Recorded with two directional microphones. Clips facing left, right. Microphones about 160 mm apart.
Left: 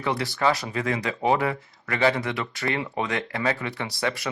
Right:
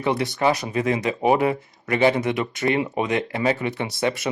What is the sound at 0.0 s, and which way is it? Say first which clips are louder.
Speech: right 3 dB; 20° right (ahead or behind).